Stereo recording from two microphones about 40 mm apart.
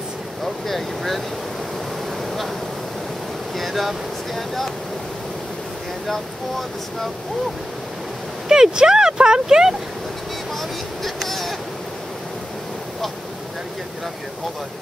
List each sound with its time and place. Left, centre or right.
0.7 s speech: centre
3.5 s speech: centre
8.5 s speech: centre
11.1 s a sound: centre